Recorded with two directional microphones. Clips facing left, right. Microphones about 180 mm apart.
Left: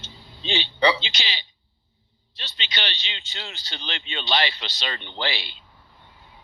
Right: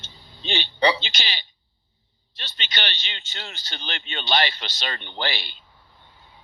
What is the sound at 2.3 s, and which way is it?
Speech, 50° right (ahead or behind).